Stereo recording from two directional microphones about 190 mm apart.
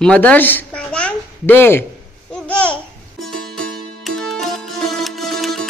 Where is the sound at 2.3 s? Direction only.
5° left (ahead or behind).